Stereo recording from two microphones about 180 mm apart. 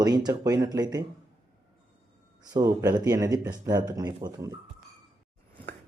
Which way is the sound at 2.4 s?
20° right (ahead or behind).